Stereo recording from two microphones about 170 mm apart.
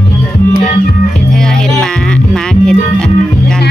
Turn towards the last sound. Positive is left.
turn(degrees=5)  # may be behind; listen again after turning